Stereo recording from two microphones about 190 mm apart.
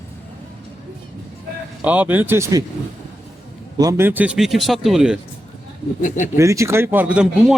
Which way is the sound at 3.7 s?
15° right (ahead or behind).